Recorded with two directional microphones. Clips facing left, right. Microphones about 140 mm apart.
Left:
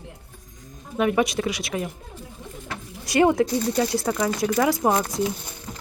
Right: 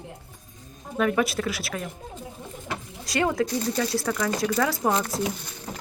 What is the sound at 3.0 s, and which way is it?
Speech, 25° left (ahead or behind).